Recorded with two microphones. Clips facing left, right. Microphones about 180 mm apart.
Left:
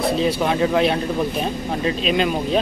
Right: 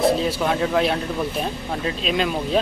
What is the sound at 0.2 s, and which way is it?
Speech, centre (ahead or behind).